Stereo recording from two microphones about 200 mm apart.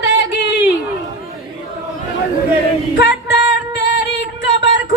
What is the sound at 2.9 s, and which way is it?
Singing, 60° left (ahead or behind).